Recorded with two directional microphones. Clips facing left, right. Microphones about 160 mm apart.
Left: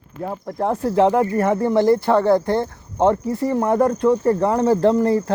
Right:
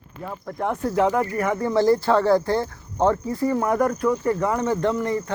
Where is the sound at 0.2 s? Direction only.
35° left (ahead or behind).